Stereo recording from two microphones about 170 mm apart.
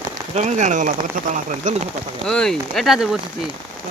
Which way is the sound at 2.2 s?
5° left (ahead or behind).